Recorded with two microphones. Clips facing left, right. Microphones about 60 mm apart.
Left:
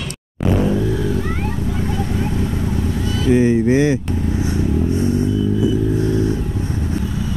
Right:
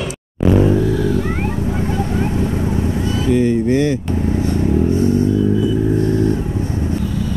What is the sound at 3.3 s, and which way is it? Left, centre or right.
Vehicle, centre.